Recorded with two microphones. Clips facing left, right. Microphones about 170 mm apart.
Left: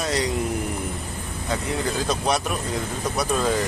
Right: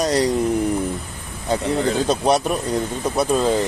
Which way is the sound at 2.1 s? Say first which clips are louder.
Right 5 dB; 30° right (ahead or behind).